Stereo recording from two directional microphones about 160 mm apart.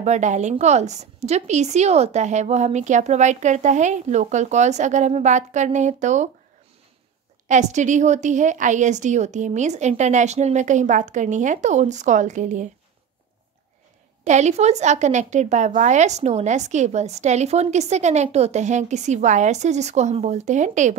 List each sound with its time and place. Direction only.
0.0 s a woman's voice: 45° right (ahead or behind)
7.4 s a woman's voice: 50° right (ahead or behind)
14.2 s a woman's voice: 45° right (ahead or behind)